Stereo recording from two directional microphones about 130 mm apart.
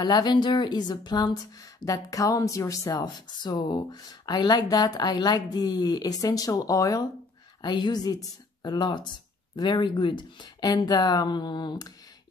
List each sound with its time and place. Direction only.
0.0 s speech: 35° left (ahead or behind)